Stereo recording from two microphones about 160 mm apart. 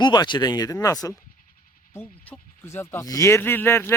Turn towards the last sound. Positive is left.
turn(degrees=15)  # may be behind; listen again after turning